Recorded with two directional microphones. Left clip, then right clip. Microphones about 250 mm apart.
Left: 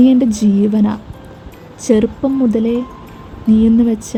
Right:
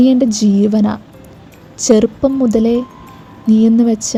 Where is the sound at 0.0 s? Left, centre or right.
Centre.